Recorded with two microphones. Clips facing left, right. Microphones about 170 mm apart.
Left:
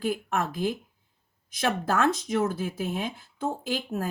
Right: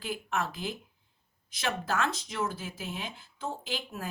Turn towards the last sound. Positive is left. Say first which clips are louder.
# left 7 dB
turn(degrees=45)  # may be behind; listen again after turning